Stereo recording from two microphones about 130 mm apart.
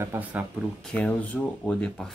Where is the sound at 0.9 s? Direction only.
10° left (ahead or behind).